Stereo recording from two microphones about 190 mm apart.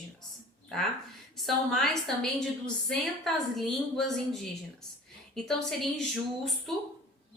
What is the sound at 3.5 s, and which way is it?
A woman's voice, centre (ahead or behind).